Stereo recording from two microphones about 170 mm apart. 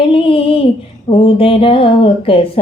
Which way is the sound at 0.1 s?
30° left (ahead or behind).